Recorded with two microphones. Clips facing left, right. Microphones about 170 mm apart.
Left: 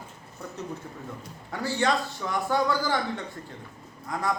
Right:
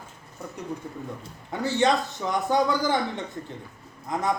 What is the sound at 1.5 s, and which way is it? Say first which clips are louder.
A man's voice: right 3 dB; 20° right (ahead or behind).